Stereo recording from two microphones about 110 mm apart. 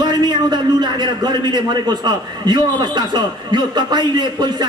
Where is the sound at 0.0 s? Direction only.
40° right (ahead or behind).